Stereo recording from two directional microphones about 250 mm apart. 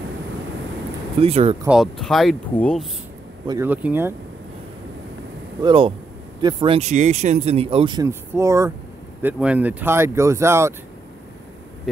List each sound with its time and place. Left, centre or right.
1.2 s speech: right
1.6 s speech: centre
3.4 s speech: centre
5.6 s speech: centre